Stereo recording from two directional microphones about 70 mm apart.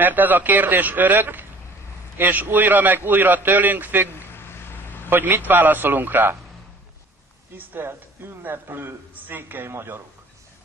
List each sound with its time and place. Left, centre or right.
0.0 s a man's voice: right
4.1 s vehicle: left
5.1 s a man's voice: right
7.5 s a man's voice: right